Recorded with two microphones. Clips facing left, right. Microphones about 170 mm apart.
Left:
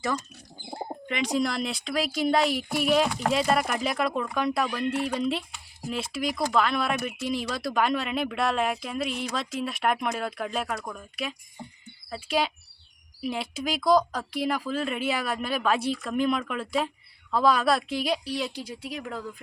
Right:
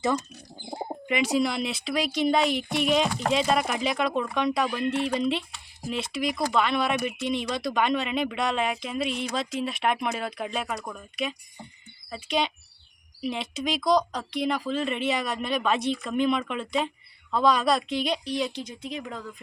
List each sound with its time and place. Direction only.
0.7 s speech: 15° right (ahead or behind); by 19.0 s 10° left (ahead or behind)